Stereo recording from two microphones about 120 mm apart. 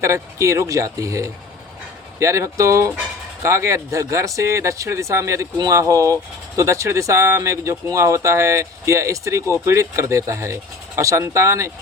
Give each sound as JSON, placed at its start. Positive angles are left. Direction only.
{"t": 0.0, "sound": "speech", "side_deg": -25}